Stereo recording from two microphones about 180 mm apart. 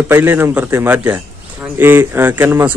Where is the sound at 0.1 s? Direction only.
15° right (ahead or behind).